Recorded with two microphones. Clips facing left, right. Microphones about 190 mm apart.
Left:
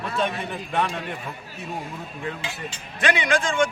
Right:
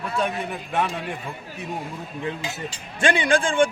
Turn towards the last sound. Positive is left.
turn(degrees=-30)  # may be behind; listen again after turning